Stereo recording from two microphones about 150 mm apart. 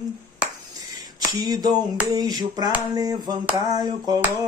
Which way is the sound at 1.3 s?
25° right (ahead or behind).